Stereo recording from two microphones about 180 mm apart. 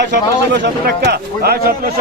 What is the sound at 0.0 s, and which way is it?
A man's voice, 75° right (ahead or behind).